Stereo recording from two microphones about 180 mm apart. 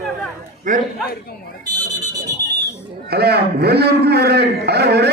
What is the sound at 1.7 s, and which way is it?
Speech, 20° right (ahead or behind).